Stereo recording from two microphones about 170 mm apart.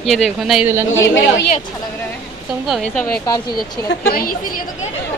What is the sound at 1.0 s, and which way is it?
Speech, 90° left.